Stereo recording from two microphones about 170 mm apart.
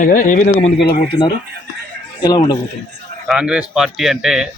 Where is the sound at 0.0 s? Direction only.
50° left (ahead or behind).